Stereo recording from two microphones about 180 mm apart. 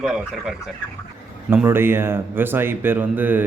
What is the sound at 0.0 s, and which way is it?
A man's voice, 5° right (ahead or behind).